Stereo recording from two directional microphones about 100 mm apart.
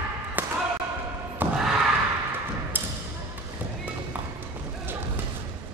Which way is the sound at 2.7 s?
20° right (ahead or behind).